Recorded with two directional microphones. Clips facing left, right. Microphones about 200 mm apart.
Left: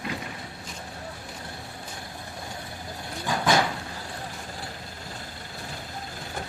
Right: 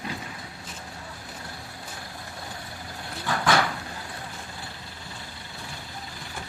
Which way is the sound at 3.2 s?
15° left (ahead or behind).